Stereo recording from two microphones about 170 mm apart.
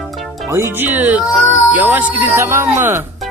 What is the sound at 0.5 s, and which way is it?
Speech, 15° right (ahead or behind).